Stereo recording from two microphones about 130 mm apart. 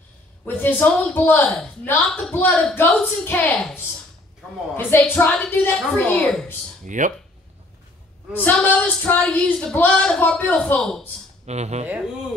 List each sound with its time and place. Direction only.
0.5 s speech: 15° left (ahead or behind)
6.8 s speech: 75° right (ahead or behind)
8.3 s speech: 15° left (ahead or behind)
11.4 s speech: 60° right (ahead or behind)